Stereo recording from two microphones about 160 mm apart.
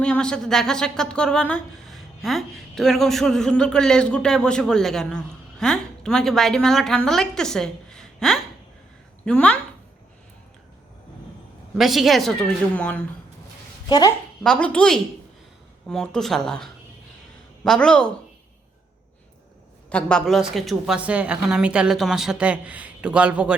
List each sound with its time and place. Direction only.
0.0 s a woman's voice: 5° left (ahead or behind)
11.8 s a woman's voice: centre (ahead or behind)
13.8 s speech: 25° left (ahead or behind)
14.4 s a woman's voice: 5° left (ahead or behind)
19.9 s a woman's voice: 5° left (ahead or behind)